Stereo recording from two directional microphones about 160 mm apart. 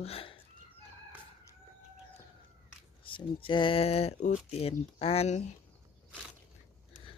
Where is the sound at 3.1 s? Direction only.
30° left (ahead or behind).